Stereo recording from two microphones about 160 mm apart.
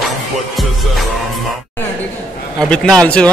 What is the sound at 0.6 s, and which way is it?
Music, centre (ahead or behind).